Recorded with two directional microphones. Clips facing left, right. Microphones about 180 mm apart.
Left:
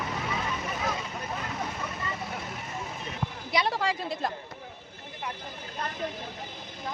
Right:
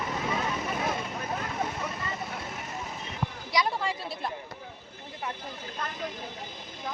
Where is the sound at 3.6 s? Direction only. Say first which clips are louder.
Left 2 dB; 90° left.